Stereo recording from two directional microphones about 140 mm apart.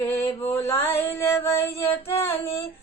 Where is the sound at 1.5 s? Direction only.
45° left (ahead or behind).